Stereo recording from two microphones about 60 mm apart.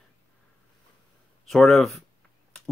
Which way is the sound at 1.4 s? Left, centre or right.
Centre.